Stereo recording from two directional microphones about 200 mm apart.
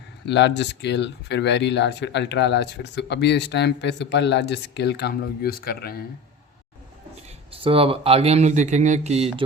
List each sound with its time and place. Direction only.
0.3 s speech: 60° left (ahead or behind)
7.5 s speech: 25° right (ahead or behind)